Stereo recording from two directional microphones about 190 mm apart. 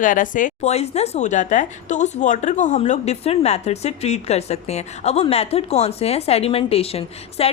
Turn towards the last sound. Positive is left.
turn(degrees=30)  # may be behind; listen again after turning